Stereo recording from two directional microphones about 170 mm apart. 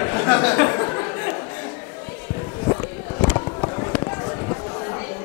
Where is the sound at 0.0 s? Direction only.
20° left (ahead or behind).